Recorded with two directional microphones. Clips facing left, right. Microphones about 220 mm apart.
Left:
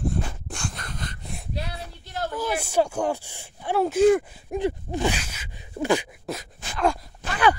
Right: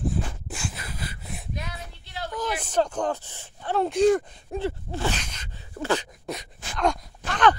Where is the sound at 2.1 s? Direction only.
45° left (ahead or behind).